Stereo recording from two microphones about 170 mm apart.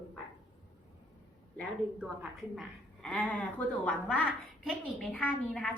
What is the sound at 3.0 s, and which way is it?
A woman's voice, 5° left (ahead or behind).